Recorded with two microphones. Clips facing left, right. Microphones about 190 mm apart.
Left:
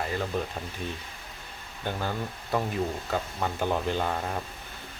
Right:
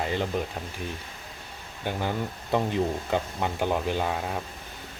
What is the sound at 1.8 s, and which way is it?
Speech, 15° right (ahead or behind).